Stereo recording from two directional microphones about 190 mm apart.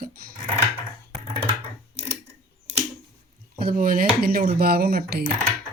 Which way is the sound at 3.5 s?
50° right (ahead or behind).